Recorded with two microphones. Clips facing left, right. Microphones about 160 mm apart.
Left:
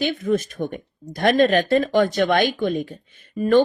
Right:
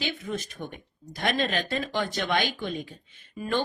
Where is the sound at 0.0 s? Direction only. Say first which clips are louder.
Left 11 dB; 50° left (ahead or behind).